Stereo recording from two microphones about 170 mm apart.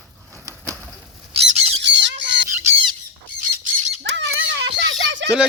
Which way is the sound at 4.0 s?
90° right.